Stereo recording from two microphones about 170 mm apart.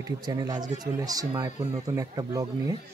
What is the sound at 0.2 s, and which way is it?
Speech, 25° right (ahead or behind).